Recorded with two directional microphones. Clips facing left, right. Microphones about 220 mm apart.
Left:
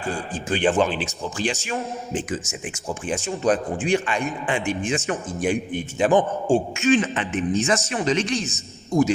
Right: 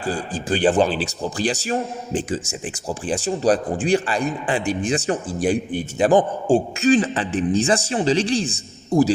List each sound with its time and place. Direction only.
0.1 s speech: 35° right (ahead or behind)